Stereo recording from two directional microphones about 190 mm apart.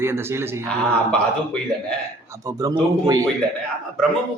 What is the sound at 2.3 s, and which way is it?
Speech, 15° right (ahead or behind).